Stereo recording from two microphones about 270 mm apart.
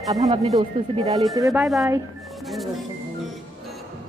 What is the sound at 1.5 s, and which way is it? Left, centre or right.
Speech, centre.